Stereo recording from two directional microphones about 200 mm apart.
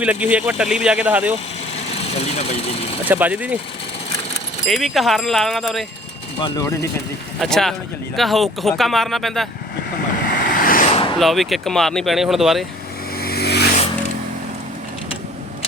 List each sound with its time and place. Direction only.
0.0 s speech: 5° right (ahead or behind)
2.1 s speech: 35° left (ahead or behind)
3.1 s speech: 10° right (ahead or behind)
4.6 s speech: centre (ahead or behind)
6.4 s speech: 15° left (ahead or behind)
7.3 s speech: centre (ahead or behind)
10.2 s vehicle: 45° left (ahead or behind)
11.2 s speech: centre (ahead or behind)
13.1 s vehicle: 50° left (ahead or behind)